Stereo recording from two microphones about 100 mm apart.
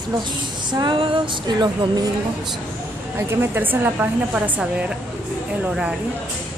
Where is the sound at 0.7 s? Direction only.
50° right (ahead or behind).